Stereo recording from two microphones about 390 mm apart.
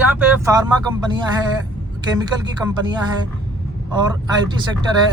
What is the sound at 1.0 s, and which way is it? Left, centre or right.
Speech, centre.